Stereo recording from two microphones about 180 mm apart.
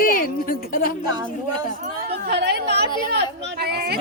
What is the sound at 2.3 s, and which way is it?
A woman's voice, 70° right (ahead or behind).